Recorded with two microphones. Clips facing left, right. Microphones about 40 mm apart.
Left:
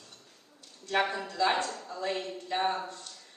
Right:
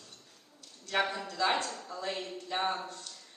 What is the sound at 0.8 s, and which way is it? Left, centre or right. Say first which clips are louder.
A man's voice: left 2 dB; left.